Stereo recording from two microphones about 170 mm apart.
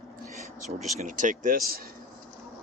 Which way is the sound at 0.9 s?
45° right (ahead or behind).